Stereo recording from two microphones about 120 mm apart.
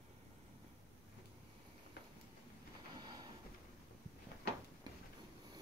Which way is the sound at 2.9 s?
35° right (ahead or behind).